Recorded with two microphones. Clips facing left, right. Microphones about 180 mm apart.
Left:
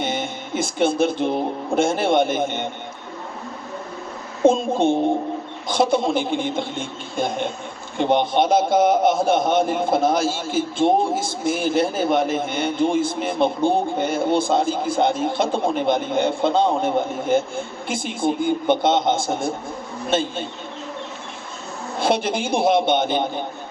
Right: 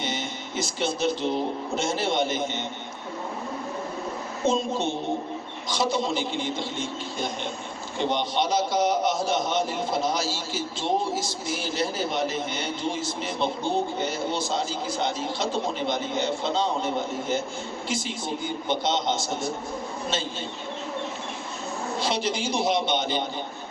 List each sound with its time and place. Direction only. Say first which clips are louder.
0.0 s speech: left 6 dB; 55° left (ahead or behind)
4.4 s a man's voice: left 8 dB; 55° left (ahead or behind)
21.9 s a man's voice: left 7 dB; 55° left (ahead or behind)